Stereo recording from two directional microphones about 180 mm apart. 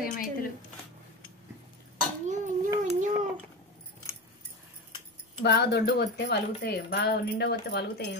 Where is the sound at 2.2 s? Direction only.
40° right (ahead or behind).